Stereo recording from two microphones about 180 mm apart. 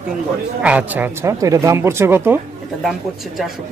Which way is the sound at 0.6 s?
10° right (ahead or behind).